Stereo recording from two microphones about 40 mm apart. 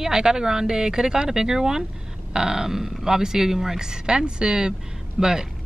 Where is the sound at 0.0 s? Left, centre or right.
Centre.